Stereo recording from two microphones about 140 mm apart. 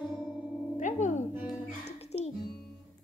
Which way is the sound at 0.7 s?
60° left (ahead or behind).